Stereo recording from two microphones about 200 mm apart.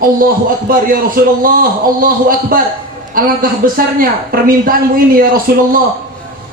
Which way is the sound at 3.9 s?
45° right (ahead or behind).